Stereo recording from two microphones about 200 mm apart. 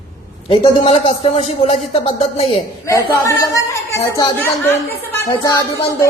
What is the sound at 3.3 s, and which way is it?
Speech, 15° left (ahead or behind).